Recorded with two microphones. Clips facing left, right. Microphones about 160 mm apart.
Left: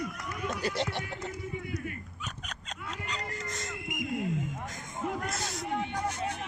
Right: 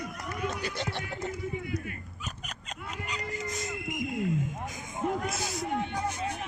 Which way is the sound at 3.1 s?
5° right (ahead or behind).